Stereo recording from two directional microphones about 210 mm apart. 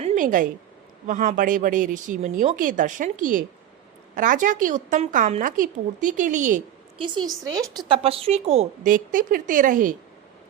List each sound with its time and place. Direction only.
0.0 s a sound: 35° right (ahead or behind)
1.0 s a woman's voice: 35° right (ahead or behind)
7.0 s a woman's voice: 25° right (ahead or behind); by 9.9 s 40° right (ahead or behind)